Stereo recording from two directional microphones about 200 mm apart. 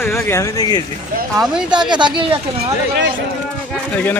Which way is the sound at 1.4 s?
5° right (ahead or behind).